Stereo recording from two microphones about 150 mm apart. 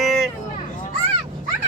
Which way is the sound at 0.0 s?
Centre (ahead or behind).